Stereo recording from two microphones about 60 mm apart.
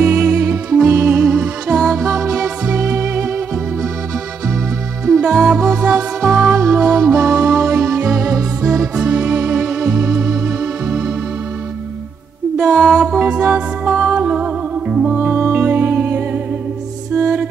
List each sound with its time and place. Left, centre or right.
0.0 s music: right; by 2.3 s centre
2.3 s music: centre
2.8 s music: right
5.0 s music: centre
6.2 s music: centre
9.0 s music: centre
9.5 s music: centre
9.8 s organ: right
12.5 s mantra: centre
12.8 s music: centre
13.2 s music: right
15.4 s music: right